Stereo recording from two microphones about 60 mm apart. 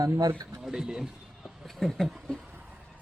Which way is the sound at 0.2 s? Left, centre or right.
Right.